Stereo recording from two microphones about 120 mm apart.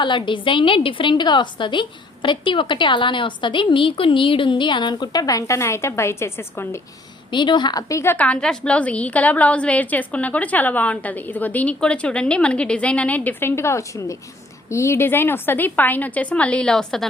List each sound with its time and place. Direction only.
0.0 s a woman's voice: 40° left (ahead or behind); by 6.7 s 20° left (ahead or behind)
7.3 s a woman's voice: 40° left (ahead or behind); by 17.1 s 5° left (ahead or behind)